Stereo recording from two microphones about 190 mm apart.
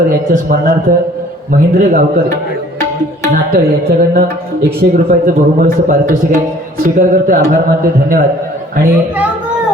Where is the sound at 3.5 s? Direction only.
50° right (ahead or behind).